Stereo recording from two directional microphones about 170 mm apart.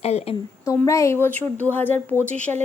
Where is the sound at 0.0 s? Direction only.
40° left (ahead or behind).